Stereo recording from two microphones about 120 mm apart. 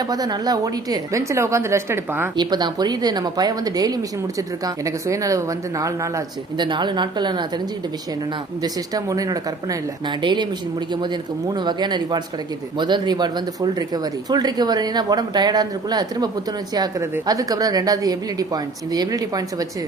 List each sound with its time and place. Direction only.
0.0 s a woman's voice: 35° right (ahead or behind)
2.3 s speech: 40° right (ahead or behind)
6.6 s speech: 40° right (ahead or behind)
8.6 s speech: 30° right (ahead or behind)